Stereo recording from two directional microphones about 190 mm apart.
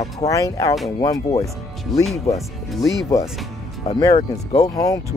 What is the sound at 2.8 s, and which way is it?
Speech, 15° left (ahead or behind).